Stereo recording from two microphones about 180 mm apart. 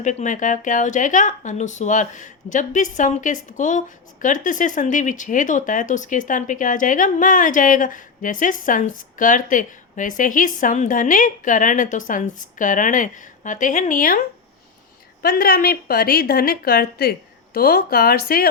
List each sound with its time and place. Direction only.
0.0 s speech: 45° left (ahead or behind)
15.2 s a woman's voice: 55° left (ahead or behind)